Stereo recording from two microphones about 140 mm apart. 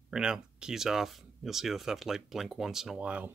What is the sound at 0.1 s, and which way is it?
Speech, 5° right (ahead or behind).